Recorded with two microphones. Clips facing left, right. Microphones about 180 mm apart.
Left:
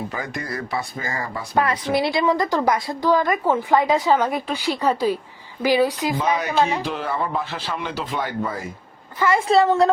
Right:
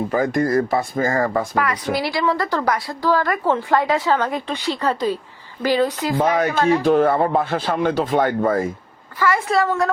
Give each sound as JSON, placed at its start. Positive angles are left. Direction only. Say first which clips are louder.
{"t": 0.1, "sound": "speech", "louder": "right 11 dB", "side_deg": -45}
{"t": 1.5, "sound": "a woman's voice", "louder": "left 1 dB", "side_deg": 25}
{"t": 6.2, "sound": "speech", "louder": "right 6 dB", "side_deg": -50}
{"t": 6.6, "sound": "speech", "louder": "right 2 dB", "side_deg": 20}
{"t": 6.8, "sound": "speech", "louder": "right 10 dB", "side_deg": -50}
{"t": 9.1, "sound": "speech", "louder": "left 2 dB", "side_deg": 20}